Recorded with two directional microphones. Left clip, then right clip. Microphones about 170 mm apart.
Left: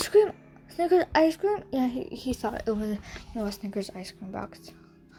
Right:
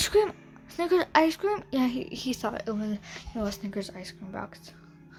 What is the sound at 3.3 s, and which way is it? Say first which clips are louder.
Speech: left 1 dB; 5° left (ahead or behind).